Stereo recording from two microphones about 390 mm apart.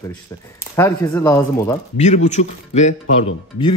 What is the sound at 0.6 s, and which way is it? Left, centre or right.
Speech, centre.